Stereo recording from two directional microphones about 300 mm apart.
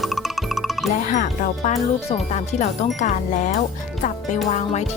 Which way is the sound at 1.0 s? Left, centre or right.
Left.